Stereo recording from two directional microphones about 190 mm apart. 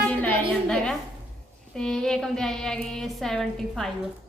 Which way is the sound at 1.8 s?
5° left (ahead or behind).